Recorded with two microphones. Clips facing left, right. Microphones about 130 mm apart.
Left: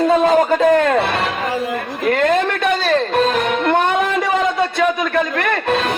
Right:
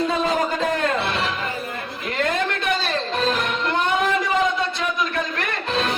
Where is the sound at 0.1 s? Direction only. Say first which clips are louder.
Left 8 dB; 55° left (ahead or behind).